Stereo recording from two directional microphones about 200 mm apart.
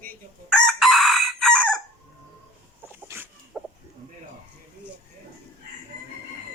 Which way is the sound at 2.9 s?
10° right (ahead or behind).